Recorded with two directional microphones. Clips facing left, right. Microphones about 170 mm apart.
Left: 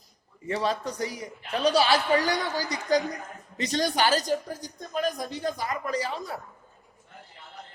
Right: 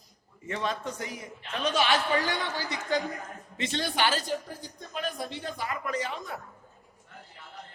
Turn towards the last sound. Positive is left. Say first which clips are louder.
# left 3 dB
turn(degrees=35)  # may be behind; listen again after turning